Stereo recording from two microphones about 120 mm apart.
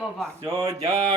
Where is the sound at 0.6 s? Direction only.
35° right (ahead or behind).